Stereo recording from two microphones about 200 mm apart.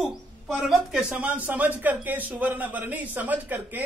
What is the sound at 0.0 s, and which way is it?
A man's voice, centre (ahead or behind).